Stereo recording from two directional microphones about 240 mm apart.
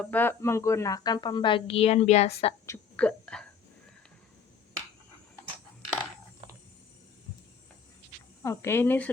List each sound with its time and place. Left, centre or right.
0.0 s a woman's voice: centre; by 2.6 s left
2.6 s whispering: centre
8.4 s a woman's voice: centre